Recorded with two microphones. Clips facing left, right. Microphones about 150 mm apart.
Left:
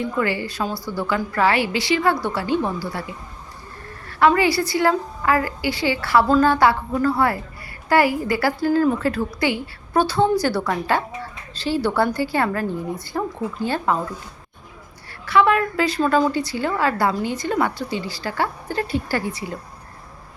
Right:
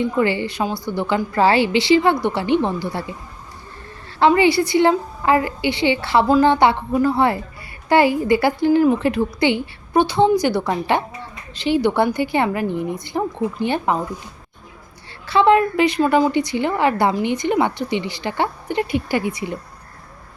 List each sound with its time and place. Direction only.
0.0 s a woman's voice: 25° right (ahead or behind)
4.2 s a woman's voice: 25° right (ahead or behind)
15.3 s a woman's voice: 25° right (ahead or behind)